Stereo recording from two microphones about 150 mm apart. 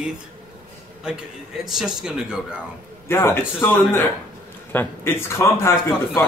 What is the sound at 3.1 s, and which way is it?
Speech, 15° left (ahead or behind).